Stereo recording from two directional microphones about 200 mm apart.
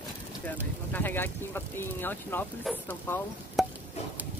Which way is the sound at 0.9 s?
10° left (ahead or behind).